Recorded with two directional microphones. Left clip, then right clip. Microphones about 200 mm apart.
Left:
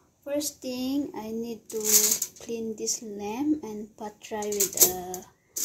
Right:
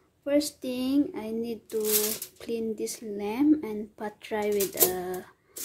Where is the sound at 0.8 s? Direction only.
10° right (ahead or behind).